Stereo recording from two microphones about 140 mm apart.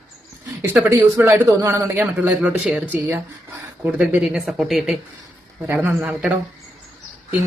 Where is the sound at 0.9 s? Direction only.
15° right (ahead or behind).